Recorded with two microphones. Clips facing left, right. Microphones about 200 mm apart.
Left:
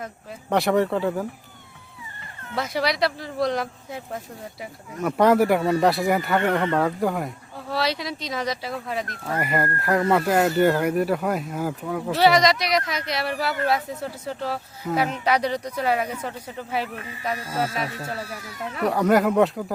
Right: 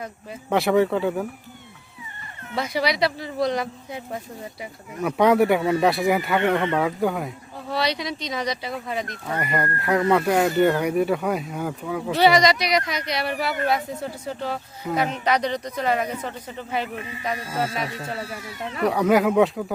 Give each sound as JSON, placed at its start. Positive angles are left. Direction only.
{"t": 0.5, "sound": "speech", "side_deg": 0}
{"t": 2.6, "sound": "speech", "side_deg": 0}
{"t": 18.2, "sound": "speech", "side_deg": -25}
{"t": 18.8, "sound": "speech", "side_deg": 0}